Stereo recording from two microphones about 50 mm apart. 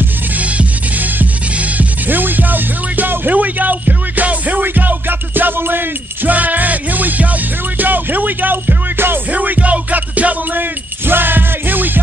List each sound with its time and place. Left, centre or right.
0.4 s music: right
9.3 s music: right